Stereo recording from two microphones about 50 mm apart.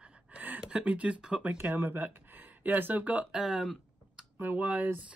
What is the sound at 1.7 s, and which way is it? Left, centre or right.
Speech, right.